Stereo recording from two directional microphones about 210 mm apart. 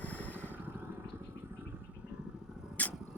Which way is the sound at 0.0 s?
5° left (ahead or behind).